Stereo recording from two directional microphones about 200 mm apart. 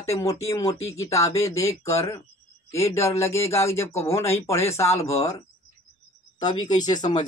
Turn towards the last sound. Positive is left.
turn(degrees=20)  # may be behind; listen again after turning